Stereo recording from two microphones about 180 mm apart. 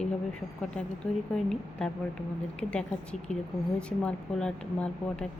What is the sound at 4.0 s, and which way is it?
Speech, 5° left (ahead or behind).